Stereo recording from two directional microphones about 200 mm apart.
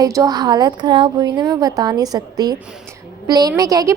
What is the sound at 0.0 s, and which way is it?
A woman's voice, 15° right (ahead or behind).